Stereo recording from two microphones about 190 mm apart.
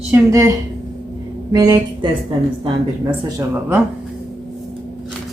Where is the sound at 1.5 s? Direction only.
20° right (ahead or behind).